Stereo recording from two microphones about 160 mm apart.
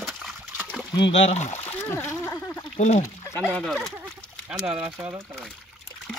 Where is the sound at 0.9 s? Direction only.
35° left (ahead or behind).